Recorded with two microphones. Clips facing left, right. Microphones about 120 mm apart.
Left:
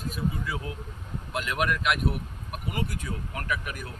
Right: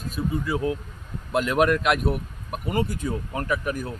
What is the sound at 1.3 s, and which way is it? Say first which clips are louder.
Speech: right 8 dB; 40° right (ahead or behind).